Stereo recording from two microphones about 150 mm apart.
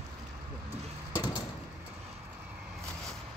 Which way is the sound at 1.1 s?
20° left (ahead or behind).